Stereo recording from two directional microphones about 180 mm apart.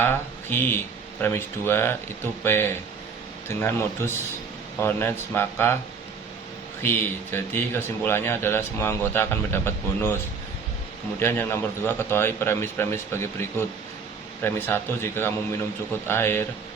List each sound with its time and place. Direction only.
0.0 s speech: 10° left (ahead or behind)
7.3 s speech: 10° left (ahead or behind)
11.2 s speech: 15° left (ahead or behind)